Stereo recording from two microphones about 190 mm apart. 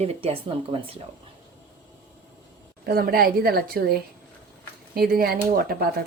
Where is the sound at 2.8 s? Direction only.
55° right (ahead or behind).